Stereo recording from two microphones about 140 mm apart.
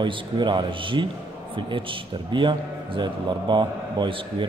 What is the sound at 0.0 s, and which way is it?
A man's voice, 35° right (ahead or behind).